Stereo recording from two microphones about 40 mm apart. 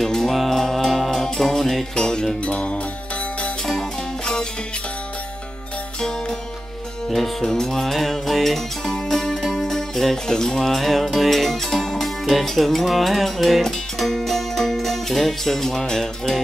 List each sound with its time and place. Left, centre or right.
0.0 s music: centre
2.0 s music: centre
2.4 s music: left
4.2 s music: centre
5.9 s music: centre
7.1 s music: centre
10.7 s music: centre